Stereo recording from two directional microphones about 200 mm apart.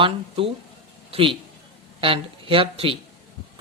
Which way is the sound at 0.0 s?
25° right (ahead or behind).